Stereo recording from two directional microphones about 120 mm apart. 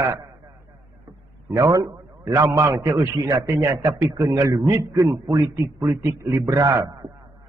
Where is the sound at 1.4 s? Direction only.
25° right (ahead or behind).